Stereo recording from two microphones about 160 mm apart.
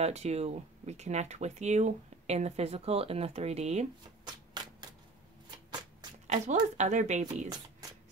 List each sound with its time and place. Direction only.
0.0 s speech: 45° right (ahead or behind)
4.2 s hands: 25° right (ahead or behind)
6.2 s a sound: 45° right (ahead or behind)
6.8 s speech: 50° right (ahead or behind)